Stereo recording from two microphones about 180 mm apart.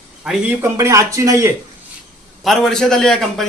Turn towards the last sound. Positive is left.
turn(degrees=0)  # may be behind; listen again after turning